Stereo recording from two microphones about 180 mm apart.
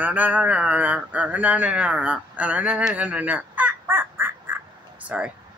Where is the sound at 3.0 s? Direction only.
10° right (ahead or behind).